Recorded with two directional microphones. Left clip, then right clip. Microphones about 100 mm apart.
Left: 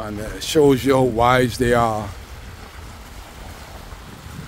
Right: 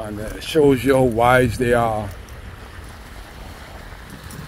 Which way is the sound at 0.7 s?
35° left (ahead or behind).